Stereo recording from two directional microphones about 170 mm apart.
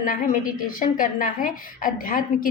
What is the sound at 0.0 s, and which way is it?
A woman's voice, 55° left (ahead or behind).